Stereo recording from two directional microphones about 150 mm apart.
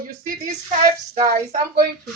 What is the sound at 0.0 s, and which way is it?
Speech, 60° right (ahead or behind).